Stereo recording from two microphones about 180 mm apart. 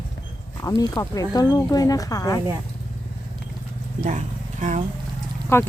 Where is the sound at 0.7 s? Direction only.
20° left (ahead or behind).